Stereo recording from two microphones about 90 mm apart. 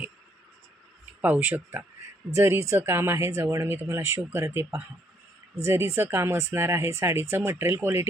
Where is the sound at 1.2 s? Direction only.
20° right (ahead or behind).